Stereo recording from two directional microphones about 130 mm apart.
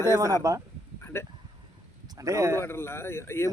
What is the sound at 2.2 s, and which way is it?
Speech, 25° right (ahead or behind).